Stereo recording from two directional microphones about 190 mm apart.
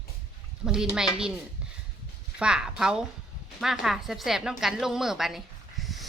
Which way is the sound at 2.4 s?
5° right (ahead or behind).